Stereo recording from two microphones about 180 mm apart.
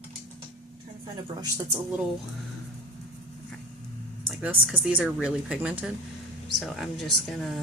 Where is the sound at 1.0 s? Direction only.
20° right (ahead or behind).